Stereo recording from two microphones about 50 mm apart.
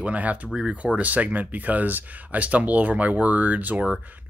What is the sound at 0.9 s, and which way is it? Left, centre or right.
Speech, right.